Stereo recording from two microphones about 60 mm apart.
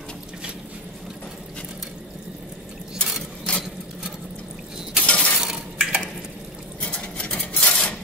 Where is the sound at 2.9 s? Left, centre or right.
Centre.